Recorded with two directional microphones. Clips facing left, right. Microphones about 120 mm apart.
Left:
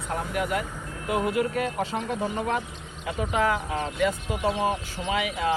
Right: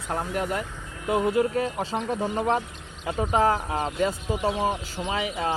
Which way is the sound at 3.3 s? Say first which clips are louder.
Right 3 dB; 35° right (ahead or behind).